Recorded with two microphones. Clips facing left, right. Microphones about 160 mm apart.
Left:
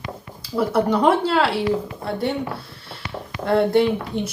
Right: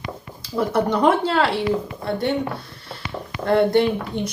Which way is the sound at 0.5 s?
10° left (ahead or behind).